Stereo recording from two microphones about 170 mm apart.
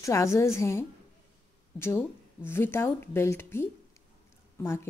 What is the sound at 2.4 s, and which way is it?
Speech, 15° left (ahead or behind).